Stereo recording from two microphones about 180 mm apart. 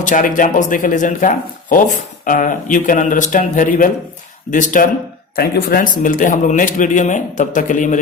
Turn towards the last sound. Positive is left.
turn(degrees=45)  # may be behind; listen again after turning